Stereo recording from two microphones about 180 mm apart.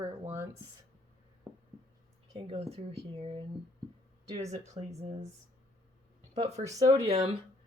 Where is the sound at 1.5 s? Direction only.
5° right (ahead or behind).